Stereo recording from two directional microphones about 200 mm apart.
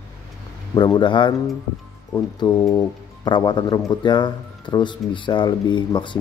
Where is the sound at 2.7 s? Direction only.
20° left (ahead or behind).